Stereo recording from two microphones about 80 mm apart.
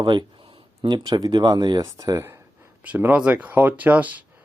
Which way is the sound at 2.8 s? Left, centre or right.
Centre.